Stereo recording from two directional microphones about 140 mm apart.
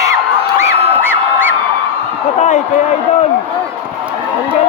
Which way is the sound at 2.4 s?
55° left (ahead or behind).